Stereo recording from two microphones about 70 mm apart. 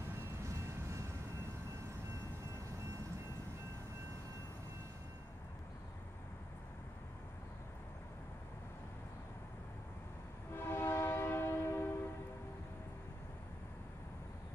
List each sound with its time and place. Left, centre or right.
10.5 s train: left